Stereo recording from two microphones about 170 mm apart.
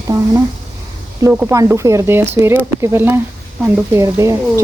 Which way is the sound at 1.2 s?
10° right (ahead or behind).